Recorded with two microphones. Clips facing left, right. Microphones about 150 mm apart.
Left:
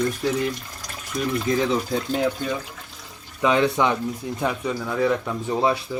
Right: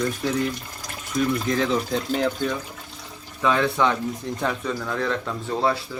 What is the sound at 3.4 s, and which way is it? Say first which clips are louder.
Speech: left 1 dB; 15° left (ahead or behind).